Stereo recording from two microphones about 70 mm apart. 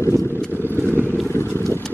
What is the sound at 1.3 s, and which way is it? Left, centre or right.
Boat, left.